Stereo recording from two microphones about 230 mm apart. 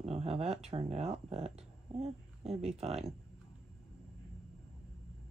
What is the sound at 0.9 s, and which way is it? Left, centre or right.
Speech, right.